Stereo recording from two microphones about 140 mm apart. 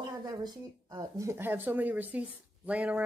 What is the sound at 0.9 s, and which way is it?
Speech, 20° right (ahead or behind).